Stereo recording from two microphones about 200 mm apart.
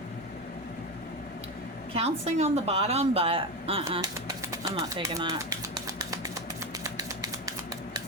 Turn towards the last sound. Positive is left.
turn(degrees=-15)  # may be behind; listen again after turning